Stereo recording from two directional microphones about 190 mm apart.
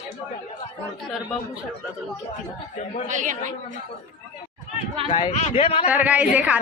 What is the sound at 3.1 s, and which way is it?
Speech, 40° right (ahead or behind).